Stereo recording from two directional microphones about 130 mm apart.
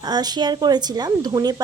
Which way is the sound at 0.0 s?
30° right (ahead or behind).